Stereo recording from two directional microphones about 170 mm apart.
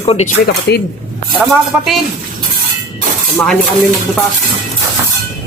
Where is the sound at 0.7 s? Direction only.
85° left.